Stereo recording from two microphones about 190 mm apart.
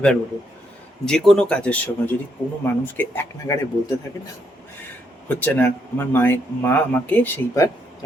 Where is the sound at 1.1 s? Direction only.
5° left (ahead or behind).